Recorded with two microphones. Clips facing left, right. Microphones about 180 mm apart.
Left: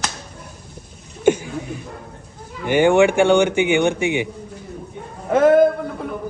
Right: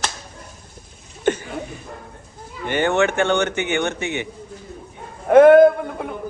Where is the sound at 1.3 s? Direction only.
10° left (ahead or behind).